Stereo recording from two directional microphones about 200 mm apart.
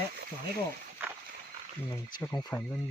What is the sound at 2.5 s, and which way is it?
Speech, 15° left (ahead or behind).